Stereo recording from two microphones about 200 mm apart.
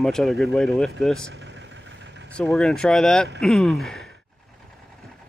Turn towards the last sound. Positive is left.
turn(degrees=0)  # may be behind; listen again after turning